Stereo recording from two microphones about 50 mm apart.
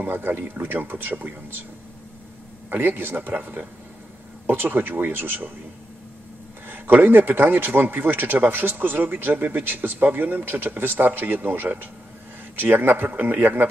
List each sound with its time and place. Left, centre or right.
0.0 s speech: right
2.7 s a man's voice: right
6.7 s a man's voice: right